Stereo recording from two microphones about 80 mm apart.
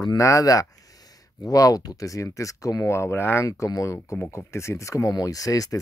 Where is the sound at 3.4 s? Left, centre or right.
Left.